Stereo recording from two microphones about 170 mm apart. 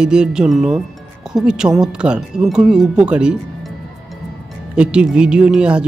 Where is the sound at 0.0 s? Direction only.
5° right (ahead or behind).